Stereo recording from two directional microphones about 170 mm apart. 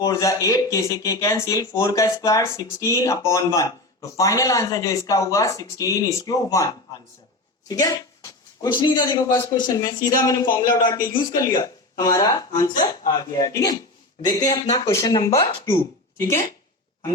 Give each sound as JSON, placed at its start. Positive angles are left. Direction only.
{"t": 0.0, "sound": "speech", "side_deg": 20}
{"t": 7.7, "sound": "speech", "side_deg": 20}